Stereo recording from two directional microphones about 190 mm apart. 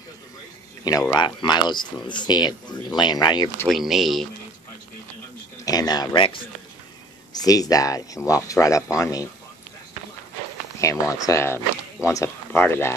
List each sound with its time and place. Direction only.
1.1 s speech: 25° left (ahead or behind)
3.6 s speech: centre (ahead or behind)
5.7 s speech: 20° left (ahead or behind)
7.3 s speech: 20° left (ahead or behind)
10.8 s speech: 15° left (ahead or behind)